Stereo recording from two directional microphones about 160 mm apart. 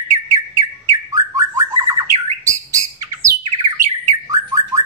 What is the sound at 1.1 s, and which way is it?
Bird, 20° right (ahead or behind).